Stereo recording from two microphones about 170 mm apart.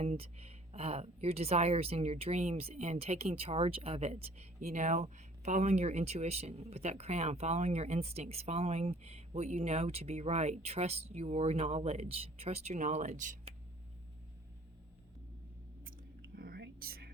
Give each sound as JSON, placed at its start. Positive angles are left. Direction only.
{"t": 0.0, "sound": "speech", "side_deg": -35}
{"t": 15.8, "sound": "whispering", "side_deg": -60}